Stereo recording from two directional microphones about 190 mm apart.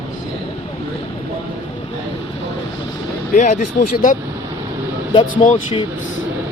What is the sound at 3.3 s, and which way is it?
Speech, 40° left (ahead or behind).